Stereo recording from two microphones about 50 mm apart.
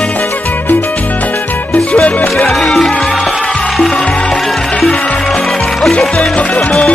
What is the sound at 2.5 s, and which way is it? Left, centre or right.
Music, centre.